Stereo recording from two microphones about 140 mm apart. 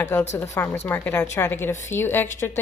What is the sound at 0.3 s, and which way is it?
Speech, 20° left (ahead or behind).